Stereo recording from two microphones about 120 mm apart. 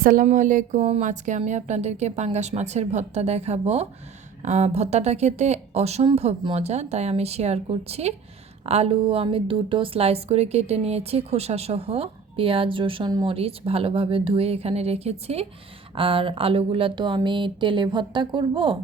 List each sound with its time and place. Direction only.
0.2 s speech: 90° right
1.4 s speech: 75° right (ahead or behind)
16.0 s speech: 50° right (ahead or behind)